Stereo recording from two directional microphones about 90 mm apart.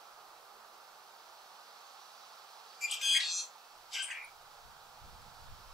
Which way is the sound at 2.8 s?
Centre (ahead or behind).